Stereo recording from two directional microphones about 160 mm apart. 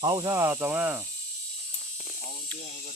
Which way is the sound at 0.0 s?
25° right (ahead or behind).